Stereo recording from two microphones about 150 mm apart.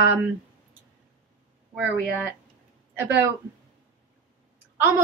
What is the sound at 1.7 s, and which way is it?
Speech, 10° right (ahead or behind).